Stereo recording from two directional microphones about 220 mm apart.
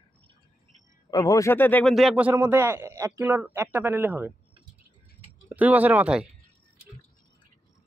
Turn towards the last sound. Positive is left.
turn(degrees=-5)  # may be behind; listen again after turning